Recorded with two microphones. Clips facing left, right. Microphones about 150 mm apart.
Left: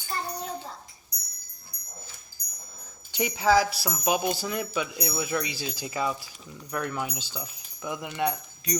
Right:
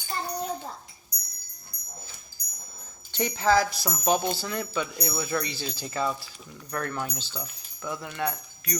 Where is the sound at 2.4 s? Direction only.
45° right (ahead or behind).